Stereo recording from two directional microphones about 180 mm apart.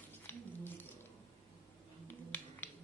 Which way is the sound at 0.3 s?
10° left (ahead or behind).